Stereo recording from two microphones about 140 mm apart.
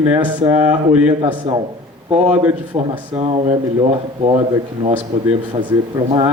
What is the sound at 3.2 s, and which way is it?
Speech, 55° right (ahead or behind).